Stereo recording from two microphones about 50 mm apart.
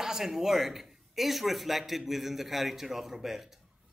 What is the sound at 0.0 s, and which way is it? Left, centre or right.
A man's voice, centre.